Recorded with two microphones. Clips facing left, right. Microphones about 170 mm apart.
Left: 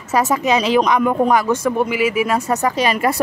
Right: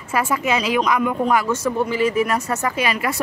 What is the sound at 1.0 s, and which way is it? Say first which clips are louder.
Speech: left 4 dB; 40° left (ahead or behind).